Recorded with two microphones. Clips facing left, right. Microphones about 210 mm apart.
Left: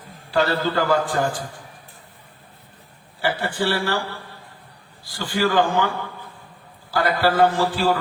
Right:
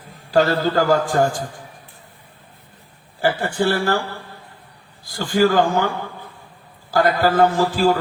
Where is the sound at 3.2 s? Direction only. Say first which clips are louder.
Right 4 dB; 45° right (ahead or behind).